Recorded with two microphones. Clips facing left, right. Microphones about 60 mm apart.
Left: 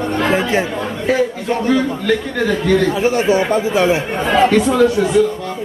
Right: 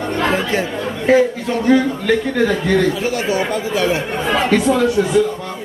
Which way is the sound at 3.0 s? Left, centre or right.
Left.